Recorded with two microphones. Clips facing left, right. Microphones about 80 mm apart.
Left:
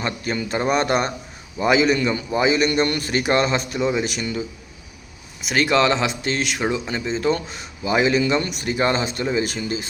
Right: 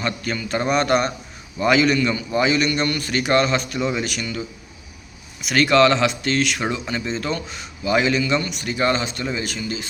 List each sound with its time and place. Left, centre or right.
0.0 s speech: left
2.3 s speech: centre
2.8 s speech: left
3.8 s speech: centre
5.5 s speech: centre
7.3 s speech: left
7.9 s speech: left
8.1 s speech: left